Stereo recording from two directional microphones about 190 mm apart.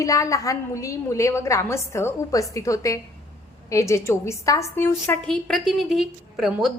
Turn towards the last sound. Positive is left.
turn(degrees=0)  # may be behind; listen again after turning